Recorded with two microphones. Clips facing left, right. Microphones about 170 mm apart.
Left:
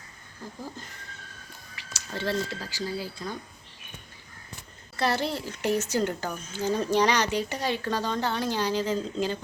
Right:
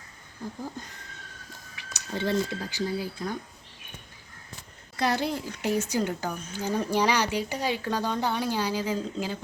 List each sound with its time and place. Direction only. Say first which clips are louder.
1.7 s a sound: right 2 dB; 20° right (ahead or behind)
2.6 s speech: right 3 dB; 15° right (ahead or behind)
4.9 s speech: even; 15° right (ahead or behind)